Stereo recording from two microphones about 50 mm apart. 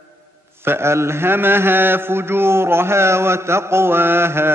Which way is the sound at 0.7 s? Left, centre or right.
Right.